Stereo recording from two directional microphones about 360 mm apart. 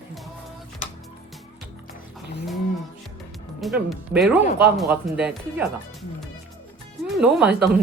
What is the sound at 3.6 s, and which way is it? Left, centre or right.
Speech, centre.